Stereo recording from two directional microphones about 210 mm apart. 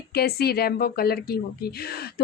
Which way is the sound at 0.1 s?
50° left (ahead or behind).